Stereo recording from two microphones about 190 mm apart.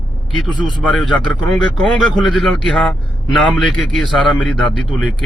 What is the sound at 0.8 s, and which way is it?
Speech, 5° left (ahead or behind).